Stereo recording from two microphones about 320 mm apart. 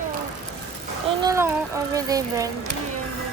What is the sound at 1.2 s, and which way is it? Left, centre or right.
Speech, centre.